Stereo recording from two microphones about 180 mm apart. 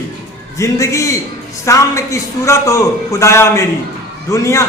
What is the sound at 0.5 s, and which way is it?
A man's voice, 15° left (ahead or behind).